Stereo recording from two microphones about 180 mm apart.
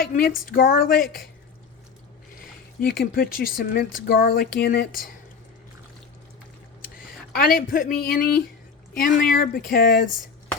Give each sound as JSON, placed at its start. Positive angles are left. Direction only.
{"t": 0.0, "sound": "a woman's voice", "side_deg": 55}
{"t": 3.0, "sound": "speech", "side_deg": 55}
{"t": 7.3, "sound": "a woman's voice", "side_deg": 55}